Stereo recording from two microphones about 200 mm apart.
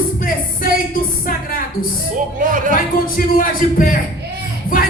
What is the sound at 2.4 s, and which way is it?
Music, 40° right (ahead or behind).